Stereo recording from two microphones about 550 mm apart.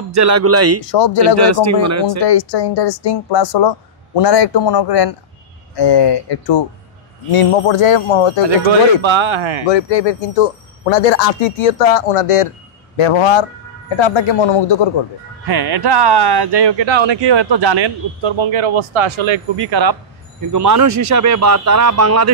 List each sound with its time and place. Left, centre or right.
0.1 s a man's voice: right
2.2 s a woman's voice: left
7.3 s speech: left
8.5 s speech: right
9.7 s speech: left
12.9 s speech: left
15.4 s a man's voice: right